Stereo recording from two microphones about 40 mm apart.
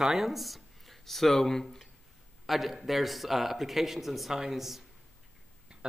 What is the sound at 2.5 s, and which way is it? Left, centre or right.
A man's voice, centre.